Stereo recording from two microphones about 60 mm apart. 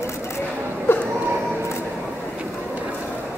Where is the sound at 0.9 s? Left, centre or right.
Left.